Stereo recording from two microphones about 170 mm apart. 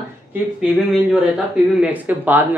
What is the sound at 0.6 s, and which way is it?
Speech, 5° right (ahead or behind).